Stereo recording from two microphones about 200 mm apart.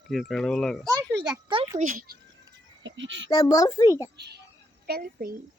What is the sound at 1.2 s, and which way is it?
Speech, 25° right (ahead or behind).